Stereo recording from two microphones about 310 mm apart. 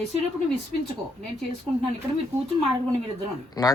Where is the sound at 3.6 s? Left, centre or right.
Centre.